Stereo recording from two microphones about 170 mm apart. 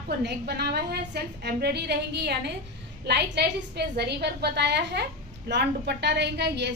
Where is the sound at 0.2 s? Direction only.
70° right (ahead or behind).